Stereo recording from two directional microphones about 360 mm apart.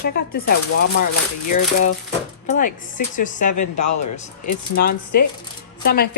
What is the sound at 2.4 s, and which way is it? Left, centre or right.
Speech, left.